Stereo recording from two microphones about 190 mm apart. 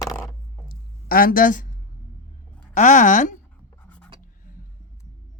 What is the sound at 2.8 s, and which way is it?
Speech, 40° left (ahead or behind).